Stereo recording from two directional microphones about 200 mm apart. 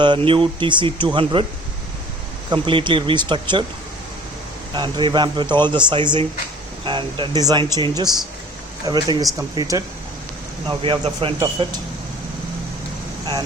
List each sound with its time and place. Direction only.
0.0 s speech: 25° right (ahead or behind)
2.5 s speech: 25° right (ahead or behind)
4.7 s speech: 20° right (ahead or behind)